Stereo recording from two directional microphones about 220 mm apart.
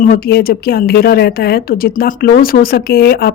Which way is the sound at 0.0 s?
40° left (ahead or behind).